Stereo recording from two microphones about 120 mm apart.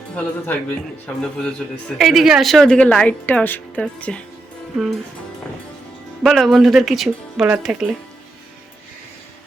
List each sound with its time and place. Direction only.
0.2 s speech: 15° left (ahead or behind)
6.2 s speech: centre (ahead or behind)